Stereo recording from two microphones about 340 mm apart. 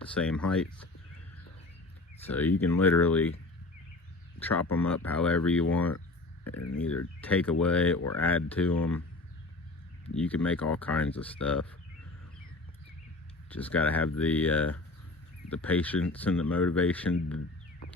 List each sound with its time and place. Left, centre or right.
0.1 s speech: centre
2.2 s speech: centre
4.4 s speech: centre
6.5 s speech: left
7.2 s speech: centre
7.9 s speech: left
8.4 s speech: centre
10.2 s speech: centre
13.5 s speech: centre